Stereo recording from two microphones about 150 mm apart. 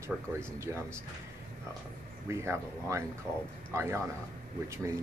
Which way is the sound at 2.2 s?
20° right (ahead or behind).